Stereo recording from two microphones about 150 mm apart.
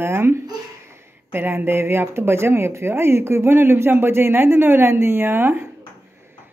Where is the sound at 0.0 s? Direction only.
15° right (ahead or behind).